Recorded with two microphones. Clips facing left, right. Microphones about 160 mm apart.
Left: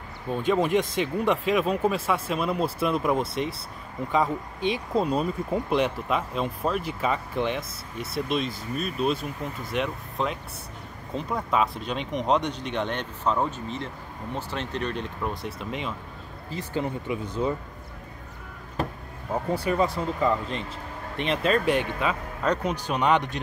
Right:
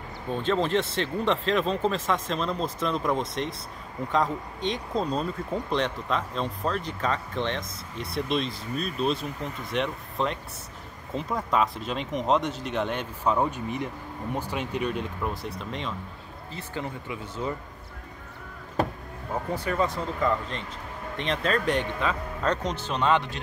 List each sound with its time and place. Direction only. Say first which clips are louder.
0.3 s speech: left 2 dB; 10° left (ahead or behind)
16.5 s speech: left 5 dB; 20° left (ahead or behind)
19.5 s speech: left 3 dB; 10° left (ahead or behind)